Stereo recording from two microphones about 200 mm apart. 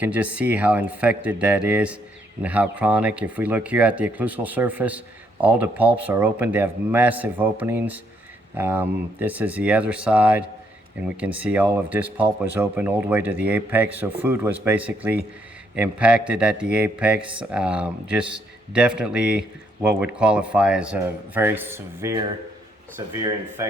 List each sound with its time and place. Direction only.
0.0 s speech: 5° right (ahead or behind)